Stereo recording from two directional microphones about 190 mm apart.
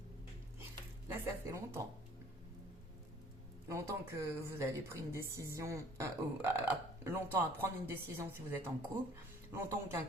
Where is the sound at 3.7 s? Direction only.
15° right (ahead or behind).